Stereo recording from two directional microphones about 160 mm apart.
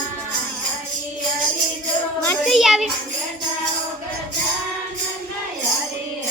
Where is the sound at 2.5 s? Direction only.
Centre (ahead or behind).